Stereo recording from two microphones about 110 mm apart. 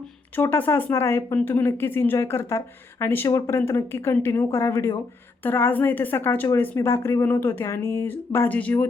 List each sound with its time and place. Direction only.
0.4 s speech: 20° left (ahead or behind)